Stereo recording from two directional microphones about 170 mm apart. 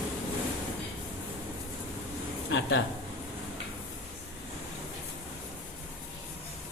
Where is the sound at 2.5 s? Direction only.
90° left.